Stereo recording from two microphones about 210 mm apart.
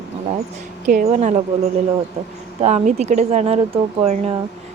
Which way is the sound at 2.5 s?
30° right (ahead or behind).